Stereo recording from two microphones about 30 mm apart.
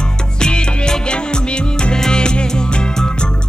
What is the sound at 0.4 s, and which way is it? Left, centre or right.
Music, left.